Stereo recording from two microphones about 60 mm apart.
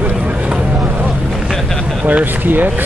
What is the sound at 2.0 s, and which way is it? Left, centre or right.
Speech, right.